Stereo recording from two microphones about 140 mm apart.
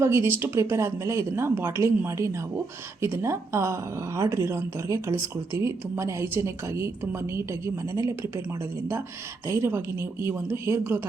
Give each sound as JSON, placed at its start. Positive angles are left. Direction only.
{"t": 0.0, "sound": "speech", "side_deg": -20}
{"t": 9.5, "sound": "speech", "side_deg": -20}